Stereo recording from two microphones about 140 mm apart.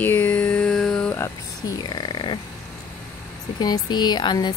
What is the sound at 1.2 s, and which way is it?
Speech, 30° left (ahead or behind).